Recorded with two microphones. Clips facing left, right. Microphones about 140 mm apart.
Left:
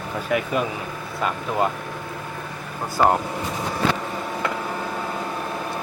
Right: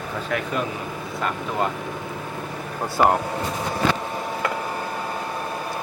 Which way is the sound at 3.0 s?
15° right (ahead or behind).